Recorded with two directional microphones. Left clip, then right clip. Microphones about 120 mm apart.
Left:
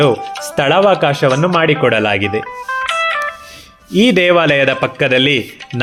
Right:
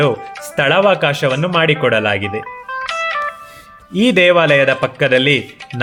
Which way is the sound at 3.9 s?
35° left (ahead or behind).